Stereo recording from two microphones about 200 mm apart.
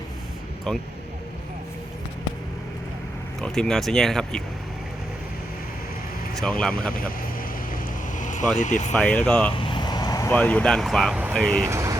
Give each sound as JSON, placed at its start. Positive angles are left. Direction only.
{"t": 0.7, "sound": "speech", "side_deg": 0}
{"t": 3.4, "sound": "speech", "side_deg": 5}
{"t": 6.3, "sound": "speech", "side_deg": 5}
{"t": 7.7, "sound": "vehicle", "side_deg": 40}
{"t": 8.5, "sound": "speech", "side_deg": 40}
{"t": 8.9, "sound": "speech", "side_deg": 5}
{"t": 9.6, "sound": "vehicle", "side_deg": 20}
{"t": 10.3, "sound": "speech", "side_deg": 5}
{"t": 11.6, "sound": "speech", "side_deg": -15}